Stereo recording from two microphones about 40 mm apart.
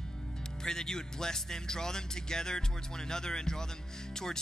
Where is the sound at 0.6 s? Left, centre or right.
Centre.